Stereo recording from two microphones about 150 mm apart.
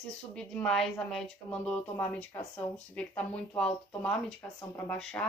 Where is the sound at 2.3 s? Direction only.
20° left (ahead or behind).